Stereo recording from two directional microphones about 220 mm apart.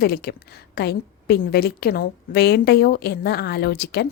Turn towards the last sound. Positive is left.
turn(degrees=45)  # may be behind; listen again after turning